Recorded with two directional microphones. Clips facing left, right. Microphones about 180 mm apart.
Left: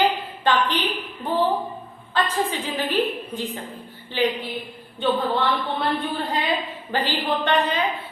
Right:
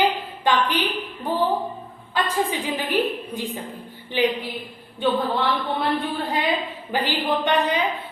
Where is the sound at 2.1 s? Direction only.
10° right (ahead or behind).